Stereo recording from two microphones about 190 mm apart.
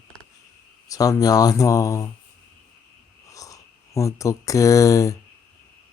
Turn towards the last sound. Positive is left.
turn(degrees=15)  # may be behind; listen again after turning